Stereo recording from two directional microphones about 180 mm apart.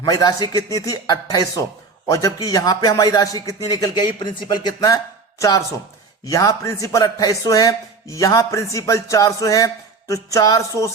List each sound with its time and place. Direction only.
0.0 s a man's voice: 20° left (ahead or behind)